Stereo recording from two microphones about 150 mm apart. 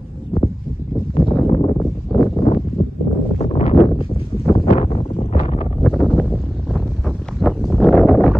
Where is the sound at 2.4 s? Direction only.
40° left (ahead or behind).